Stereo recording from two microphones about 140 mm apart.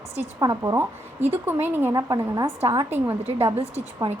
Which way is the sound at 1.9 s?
25° right (ahead or behind).